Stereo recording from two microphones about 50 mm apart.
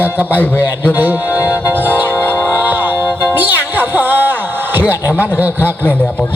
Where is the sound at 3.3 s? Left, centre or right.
Right.